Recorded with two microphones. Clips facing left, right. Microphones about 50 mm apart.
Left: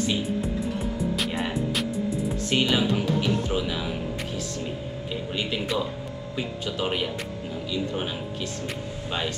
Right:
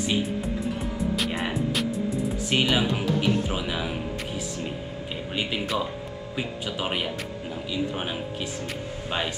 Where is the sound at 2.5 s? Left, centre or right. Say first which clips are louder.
Even; centre.